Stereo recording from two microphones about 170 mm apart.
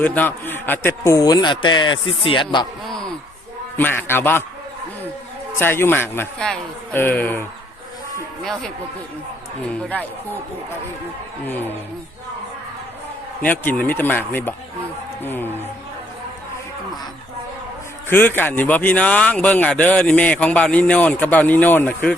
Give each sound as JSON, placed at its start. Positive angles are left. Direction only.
{"t": 0.0, "sound": "a man's voice", "side_deg": 10}
{"t": 2.8, "sound": "a sound", "side_deg": 0}
{"t": 3.8, "sound": "a man's voice", "side_deg": 10}
{"t": 5.5, "sound": "a man's voice", "side_deg": 10}
{"t": 9.7, "sound": "a man's voice", "side_deg": 10}
{"t": 11.4, "sound": "a man's voice", "side_deg": 10}
{"t": 13.4, "sound": "a man's voice", "side_deg": 10}
{"t": 18.1, "sound": "a man's voice", "side_deg": 10}